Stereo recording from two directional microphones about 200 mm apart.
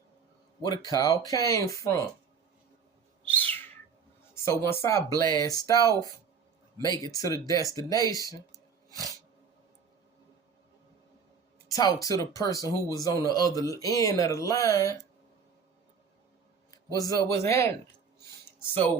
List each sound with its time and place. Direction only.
0.6 s speech: 20° left (ahead or behind)
3.2 s bird: 10° left (ahead or behind)
4.4 s speech: 15° left (ahead or behind)
8.4 s a sound: 15° right (ahead or behind)
11.7 s speech: 20° left (ahead or behind)
17.0 s speech: 15° left (ahead or behind)